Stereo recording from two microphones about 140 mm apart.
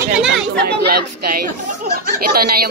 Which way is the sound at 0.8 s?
90° right.